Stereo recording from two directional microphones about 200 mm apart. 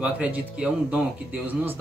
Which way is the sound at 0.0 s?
5° right (ahead or behind).